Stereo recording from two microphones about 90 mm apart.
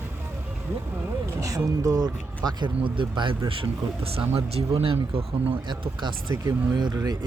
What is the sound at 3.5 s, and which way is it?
Speech, 85° right.